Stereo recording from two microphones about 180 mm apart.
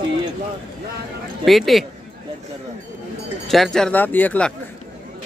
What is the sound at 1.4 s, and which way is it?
Speech, centre (ahead or behind).